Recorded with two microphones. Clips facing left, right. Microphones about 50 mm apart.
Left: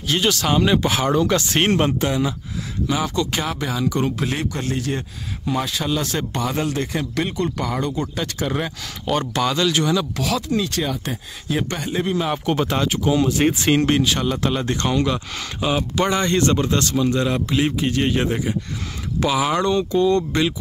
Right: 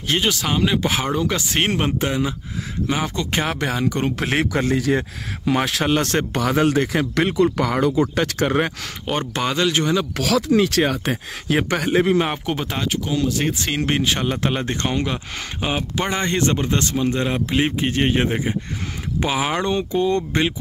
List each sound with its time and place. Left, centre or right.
0.2 s speech: centre
2.0 s speech: centre; by 4.1 s right
4.1 s speech: right
9.3 s speech: right
10.1 s speech: right
12.4 s speech: centre
12.8 s speech: centre
13.2 s speech: centre
13.9 s speech: right